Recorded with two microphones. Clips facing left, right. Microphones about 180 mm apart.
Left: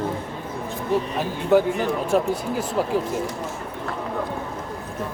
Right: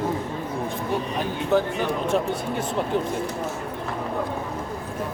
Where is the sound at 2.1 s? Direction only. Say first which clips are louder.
Left 4 dB; 5° left (ahead or behind).